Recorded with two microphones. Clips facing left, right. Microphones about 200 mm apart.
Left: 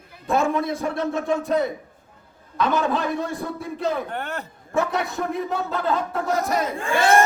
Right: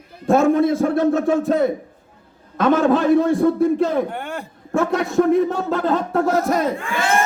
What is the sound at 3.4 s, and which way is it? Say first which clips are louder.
Speech: right 11 dB; 50° right (ahead or behind).